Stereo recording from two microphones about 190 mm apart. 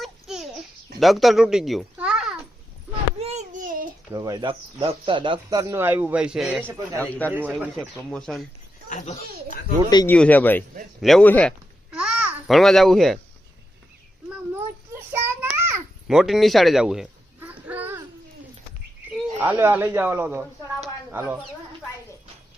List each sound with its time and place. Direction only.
0.0 s babbling: centre (ahead or behind)
0.9 s a child's voice: centre (ahead or behind)
3.2 s a sound: 35° right (ahead or behind)
4.1 s speech: 20° right (ahead or behind)
7.0 s speech: 10° left (ahead or behind)
7.3 s speech: 10° right (ahead or behind)
7.8 s speech: 5° left (ahead or behind)
8.9 s a child's voice: 40° left (ahead or behind)
10.1 s speech: 10° left (ahead or behind)
11.9 s babbling: 5° right (ahead or behind)
14.9 s child singing: 10° right (ahead or behind)
16.0 s a sound: centre (ahead or behind)
19.1 s speech: 10° right (ahead or behind)